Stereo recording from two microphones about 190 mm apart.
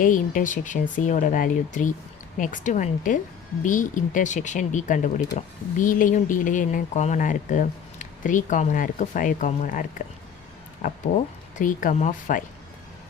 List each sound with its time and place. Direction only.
0.0 s speech: 45° left (ahead or behind)